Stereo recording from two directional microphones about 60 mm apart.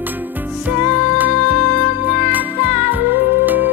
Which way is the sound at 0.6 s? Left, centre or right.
Right.